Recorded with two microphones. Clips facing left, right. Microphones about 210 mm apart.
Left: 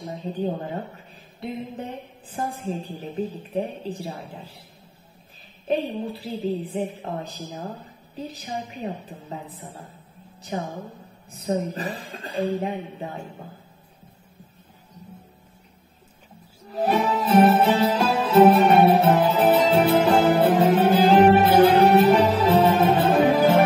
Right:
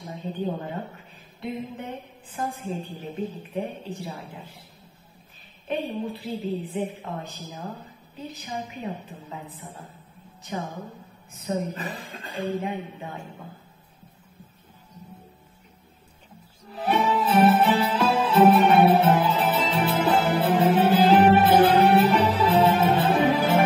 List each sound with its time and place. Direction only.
0.1 s a woman's voice: 35° left (ahead or behind)
2.3 s speech: 35° left (ahead or behind)
5.7 s speech: 35° left (ahead or behind)
16.7 s music: 40° left (ahead or behind)